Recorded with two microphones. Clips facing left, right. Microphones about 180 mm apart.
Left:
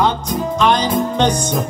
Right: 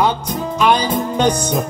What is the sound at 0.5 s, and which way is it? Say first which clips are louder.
Music: even; 10° right (ahead or behind).